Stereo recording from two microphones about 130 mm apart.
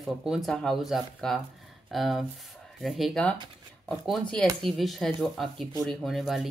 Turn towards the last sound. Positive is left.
turn(degrees=0)  # may be behind; listen again after turning